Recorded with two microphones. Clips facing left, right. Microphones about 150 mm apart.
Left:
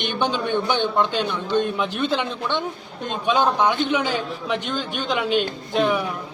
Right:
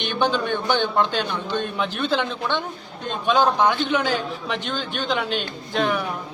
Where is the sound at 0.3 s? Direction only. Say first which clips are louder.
Even; 50° right (ahead or behind).